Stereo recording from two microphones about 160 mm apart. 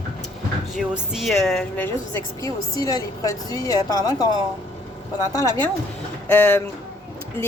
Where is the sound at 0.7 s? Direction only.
5° right (ahead or behind); by 4.0 s 20° left (ahead or behind).